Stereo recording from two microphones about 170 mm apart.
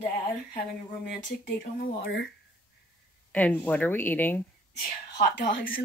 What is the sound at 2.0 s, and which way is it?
Speech, 70° left (ahead or behind).